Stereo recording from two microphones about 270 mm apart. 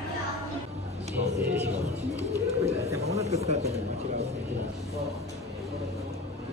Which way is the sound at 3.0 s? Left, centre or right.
Right.